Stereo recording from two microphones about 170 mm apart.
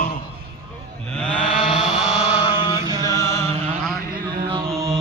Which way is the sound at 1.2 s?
5° left (ahead or behind).